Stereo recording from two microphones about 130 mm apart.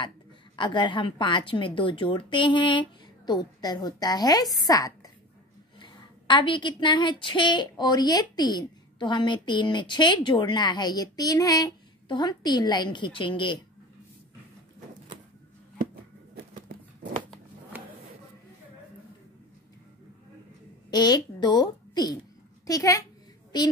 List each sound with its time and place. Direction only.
0.6 s a woman's voice: 35° left (ahead or behind)
16.5 s a sound: 90° right
20.9 s a woman's voice: 35° left (ahead or behind)